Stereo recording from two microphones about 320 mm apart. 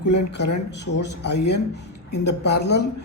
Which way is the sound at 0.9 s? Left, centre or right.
Left.